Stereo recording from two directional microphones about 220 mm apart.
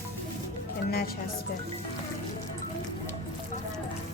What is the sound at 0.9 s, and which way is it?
Speech, 45° left (ahead or behind).